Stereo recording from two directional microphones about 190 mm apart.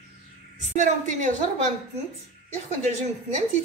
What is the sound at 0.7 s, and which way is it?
A woman's voice, 40° right (ahead or behind).